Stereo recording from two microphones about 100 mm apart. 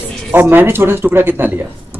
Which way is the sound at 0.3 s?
20° right (ahead or behind).